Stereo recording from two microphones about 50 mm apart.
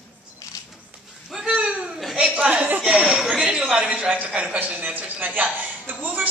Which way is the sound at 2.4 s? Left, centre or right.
Right.